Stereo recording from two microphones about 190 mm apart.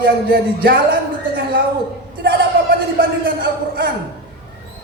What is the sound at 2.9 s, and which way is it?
Speech, 55° right (ahead or behind).